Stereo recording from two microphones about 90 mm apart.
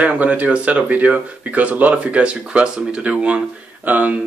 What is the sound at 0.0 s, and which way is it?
Speech, 15° right (ahead or behind).